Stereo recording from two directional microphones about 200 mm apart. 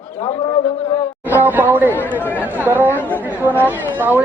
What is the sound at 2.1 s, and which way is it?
Speech, 10° left (ahead or behind).